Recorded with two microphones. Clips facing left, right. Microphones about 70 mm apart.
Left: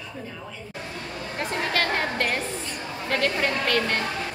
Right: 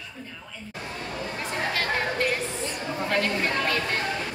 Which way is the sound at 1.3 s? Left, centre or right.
Left.